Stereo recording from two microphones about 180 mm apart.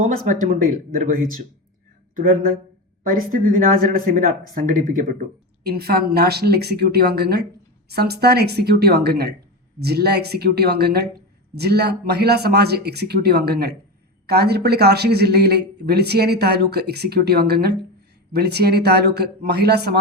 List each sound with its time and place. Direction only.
0.9 s speech: 50° right (ahead or behind)
3.1 s speech: 50° right (ahead or behind)
5.6 s speech: 60° right (ahead or behind)